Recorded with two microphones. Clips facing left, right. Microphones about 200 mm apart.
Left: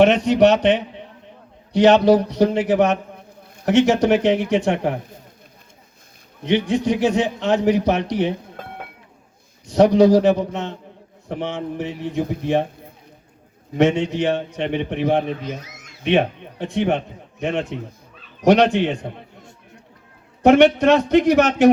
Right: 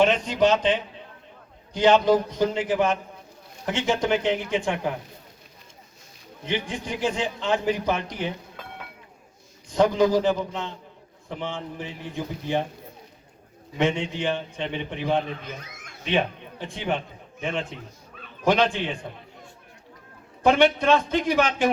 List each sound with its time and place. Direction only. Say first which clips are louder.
0.0 s a man's voice: left 7 dB; 70° left (ahead or behind)
6.4 s a man's voice: left 10 dB; 70° left (ahead or behind)
9.6 s a man's voice: left 7 dB; 75° left (ahead or behind)
13.7 s a man's voice: left 7 dB; 70° left (ahead or behind)
15.6 s a sound: left 2 dB; 55° right (ahead or behind)
16.0 s a man's voice: left 7 dB; 60° left (ahead or behind)
20.4 s a man's voice: left 7 dB; 70° left (ahead or behind)